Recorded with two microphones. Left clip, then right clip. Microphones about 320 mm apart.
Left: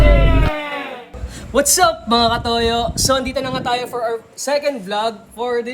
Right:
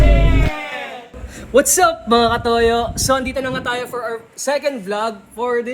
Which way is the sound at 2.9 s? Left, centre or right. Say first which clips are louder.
Even; centre.